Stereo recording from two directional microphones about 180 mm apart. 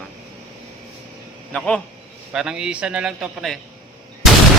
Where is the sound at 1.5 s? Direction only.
5° left (ahead or behind).